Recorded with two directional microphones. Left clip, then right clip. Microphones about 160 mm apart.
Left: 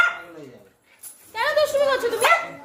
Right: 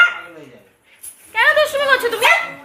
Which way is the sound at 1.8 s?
15° left (ahead or behind).